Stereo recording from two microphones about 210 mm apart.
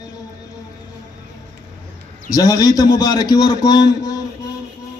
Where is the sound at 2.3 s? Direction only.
15° left (ahead or behind).